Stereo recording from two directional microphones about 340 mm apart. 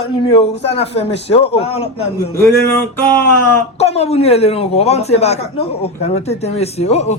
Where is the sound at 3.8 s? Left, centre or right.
Centre.